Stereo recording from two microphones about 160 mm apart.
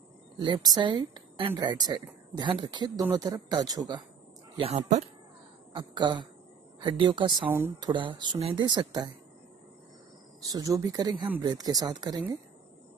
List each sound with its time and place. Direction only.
0.4 s a woman's voice: 30° right (ahead or behind)
4.6 s speech: 45° right (ahead or behind)
5.8 s a woman's voice: 30° right (ahead or behind)
7.4 s speech: 10° right (ahead or behind)
7.8 s a woman's voice: 30° right (ahead or behind)
10.5 s a woman's voice: 20° right (ahead or behind)